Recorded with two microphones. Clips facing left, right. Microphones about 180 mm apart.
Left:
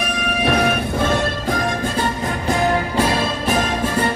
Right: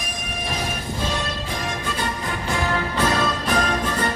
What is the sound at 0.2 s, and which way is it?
Music, 65° left (ahead or behind).